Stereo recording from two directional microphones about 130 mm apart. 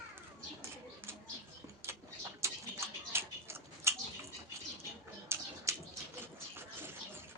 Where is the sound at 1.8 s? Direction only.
20° right (ahead or behind).